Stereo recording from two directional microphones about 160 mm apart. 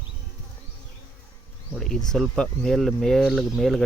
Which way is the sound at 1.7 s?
5° left (ahead or behind).